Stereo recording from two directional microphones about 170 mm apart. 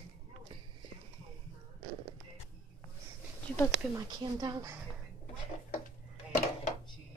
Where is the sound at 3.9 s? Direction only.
20° right (ahead or behind).